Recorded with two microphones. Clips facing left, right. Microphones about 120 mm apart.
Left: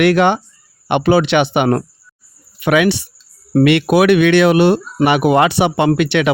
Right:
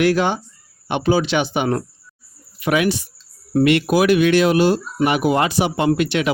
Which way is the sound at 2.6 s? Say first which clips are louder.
Left 5 dB; 75° left (ahead or behind).